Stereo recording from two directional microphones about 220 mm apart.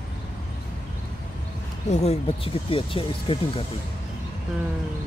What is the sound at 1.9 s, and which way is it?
Speech, 30° left (ahead or behind).